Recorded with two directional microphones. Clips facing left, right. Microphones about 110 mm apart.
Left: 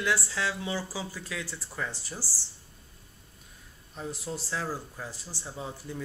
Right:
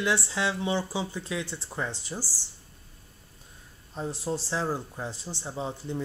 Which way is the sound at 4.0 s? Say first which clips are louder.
Right 5 dB; 30° right (ahead or behind).